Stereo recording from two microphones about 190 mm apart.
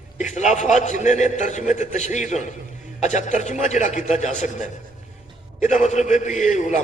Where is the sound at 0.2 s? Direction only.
40° left (ahead or behind).